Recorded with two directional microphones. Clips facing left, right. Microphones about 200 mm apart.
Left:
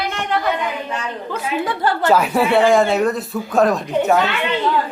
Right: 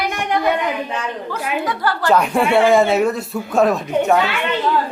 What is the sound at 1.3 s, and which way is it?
Speech, 25° left (ahead or behind).